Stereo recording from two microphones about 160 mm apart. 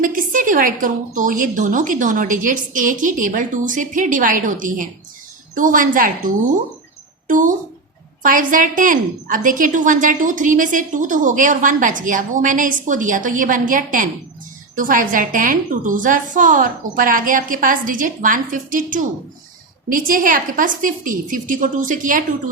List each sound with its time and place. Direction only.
0.0 s a woman's voice: 55° right (ahead or behind)